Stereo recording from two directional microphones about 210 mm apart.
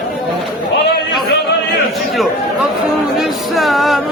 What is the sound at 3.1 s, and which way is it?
Music, centre (ahead or behind).